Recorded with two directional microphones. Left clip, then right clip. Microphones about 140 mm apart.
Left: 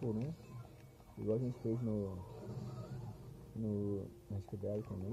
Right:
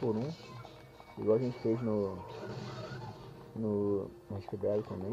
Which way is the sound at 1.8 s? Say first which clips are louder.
Right 8 dB; 25° right (ahead or behind).